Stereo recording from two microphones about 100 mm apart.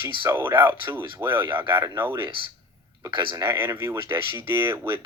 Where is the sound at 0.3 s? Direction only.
25° right (ahead or behind).